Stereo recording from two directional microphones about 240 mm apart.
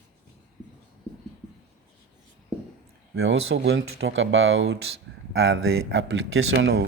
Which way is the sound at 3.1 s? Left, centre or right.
Right.